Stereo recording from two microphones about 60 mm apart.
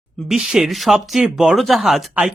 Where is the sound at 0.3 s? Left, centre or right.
Centre.